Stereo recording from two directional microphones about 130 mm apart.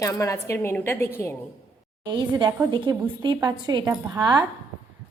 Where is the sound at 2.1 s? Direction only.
35° right (ahead or behind).